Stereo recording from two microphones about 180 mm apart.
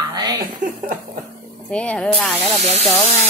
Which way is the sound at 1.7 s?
5° left (ahead or behind).